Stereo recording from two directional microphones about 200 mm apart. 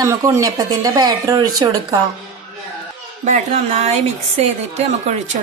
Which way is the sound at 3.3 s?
30° right (ahead or behind).